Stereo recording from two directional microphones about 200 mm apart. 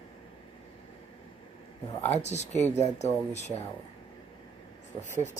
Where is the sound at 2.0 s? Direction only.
35° left (ahead or behind).